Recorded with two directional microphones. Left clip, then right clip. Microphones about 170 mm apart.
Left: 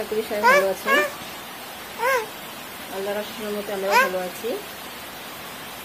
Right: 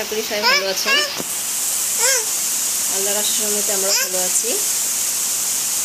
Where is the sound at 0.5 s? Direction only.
20° left (ahead or behind).